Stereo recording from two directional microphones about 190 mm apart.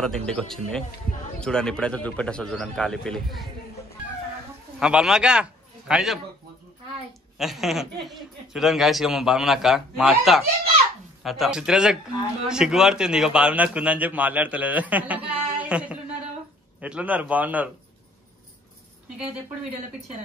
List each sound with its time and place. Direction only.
0.0 s speech: 5° left (ahead or behind)
4.7 s a man's voice: 5° right (ahead or behind)
7.3 s a man's voice: centre (ahead or behind)